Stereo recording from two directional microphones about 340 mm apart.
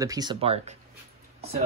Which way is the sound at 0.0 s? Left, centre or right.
Centre.